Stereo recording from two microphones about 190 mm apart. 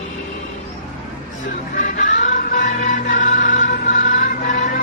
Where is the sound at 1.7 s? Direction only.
45° left (ahead or behind).